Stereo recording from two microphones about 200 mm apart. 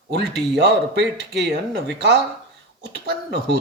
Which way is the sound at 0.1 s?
55° right (ahead or behind).